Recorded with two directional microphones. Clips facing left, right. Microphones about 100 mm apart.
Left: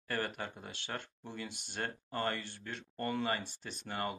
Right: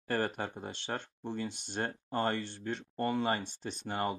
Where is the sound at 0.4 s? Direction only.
30° right (ahead or behind).